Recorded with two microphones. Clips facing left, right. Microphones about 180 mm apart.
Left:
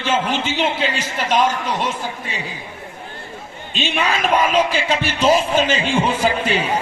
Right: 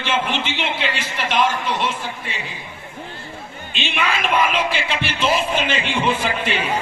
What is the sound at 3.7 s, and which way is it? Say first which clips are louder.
Speech: left 3 dB; 40° left (ahead or behind).